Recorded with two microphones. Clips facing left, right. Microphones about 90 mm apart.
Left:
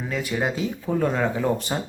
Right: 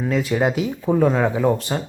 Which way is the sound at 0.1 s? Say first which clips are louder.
Right 7 dB; centre (ahead or behind).